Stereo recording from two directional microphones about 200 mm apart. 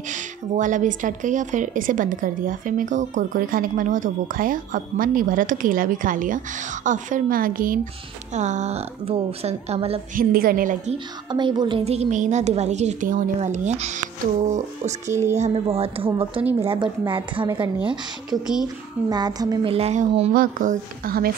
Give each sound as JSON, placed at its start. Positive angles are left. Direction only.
{"t": 0.1, "sound": "a woman's voice", "side_deg": -40}
{"t": 10.1, "sound": "a woman's voice", "side_deg": -45}
{"t": 11.2, "sound": "a woman's voice", "side_deg": -20}
{"t": 15.0, "sound": "speech", "side_deg": -15}
{"t": 15.3, "sound": "a woman's voice", "side_deg": -30}